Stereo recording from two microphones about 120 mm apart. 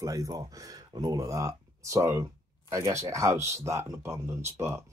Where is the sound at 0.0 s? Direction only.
25° right (ahead or behind).